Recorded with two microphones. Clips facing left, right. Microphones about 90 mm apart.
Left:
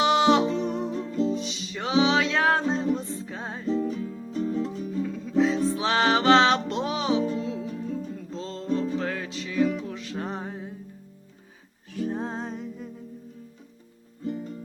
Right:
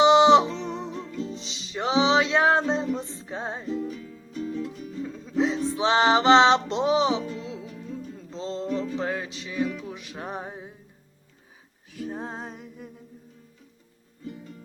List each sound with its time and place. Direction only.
0.0 s music: 20° right (ahead or behind)
0.8 s music: 25° left (ahead or behind)
1.4 s music: 30° right (ahead or behind)
3.7 s music: 35° left (ahead or behind)
5.0 s music: 25° right (ahead or behind)
7.2 s music: 30° left (ahead or behind)
8.3 s music: 25° right (ahead or behind)
8.7 s music: 35° left (ahead or behind)
9.0 s music: 20° right (ahead or behind)
11.9 s music: centre (ahead or behind)